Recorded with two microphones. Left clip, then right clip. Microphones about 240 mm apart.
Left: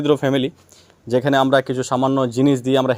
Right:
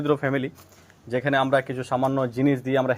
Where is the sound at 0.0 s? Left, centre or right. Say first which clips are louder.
Left 6 dB; left.